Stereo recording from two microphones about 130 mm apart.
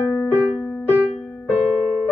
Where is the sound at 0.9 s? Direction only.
10° right (ahead or behind).